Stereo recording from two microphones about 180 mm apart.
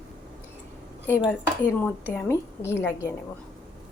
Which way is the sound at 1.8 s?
10° left (ahead or behind).